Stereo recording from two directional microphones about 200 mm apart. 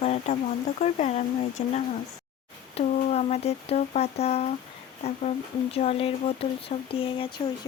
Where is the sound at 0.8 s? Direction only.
35° left (ahead or behind).